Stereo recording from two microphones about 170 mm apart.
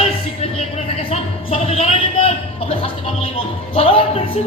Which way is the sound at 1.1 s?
40° left (ahead or behind).